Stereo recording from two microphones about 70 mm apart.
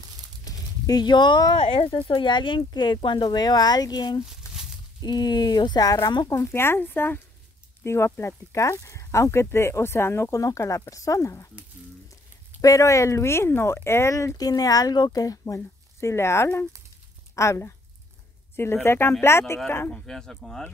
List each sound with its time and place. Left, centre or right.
0.5 s a sound: left
2.2 s speech: left
4.4 s a sound: left
5.0 s speech: left
6.2 s speech: left
7.8 s speech: left
10.3 s speech: left
12.6 s speech: left
14.1 s speech: left
18.9 s speech: left
19.9 s speech: centre